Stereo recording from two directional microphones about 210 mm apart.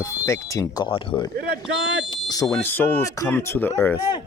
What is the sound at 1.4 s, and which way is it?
Speech, 50° right (ahead or behind).